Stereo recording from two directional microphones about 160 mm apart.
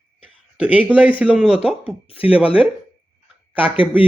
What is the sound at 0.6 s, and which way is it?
Speech, 10° right (ahead or behind).